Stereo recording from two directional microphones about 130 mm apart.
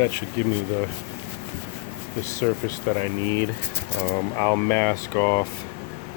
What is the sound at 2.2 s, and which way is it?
Speech, 20° left (ahead or behind).